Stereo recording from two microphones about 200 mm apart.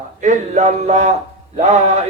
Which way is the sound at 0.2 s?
35° right (ahead or behind).